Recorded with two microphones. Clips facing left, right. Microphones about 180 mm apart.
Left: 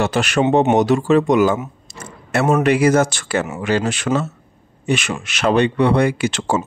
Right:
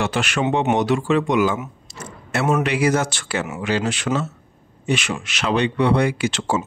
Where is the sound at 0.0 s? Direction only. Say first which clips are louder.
Left 4 dB; 40° left (ahead or behind).